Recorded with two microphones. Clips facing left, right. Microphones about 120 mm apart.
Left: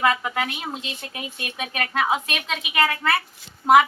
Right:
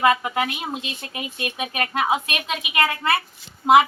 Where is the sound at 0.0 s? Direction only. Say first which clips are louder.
Right 3 dB; 15° right (ahead or behind).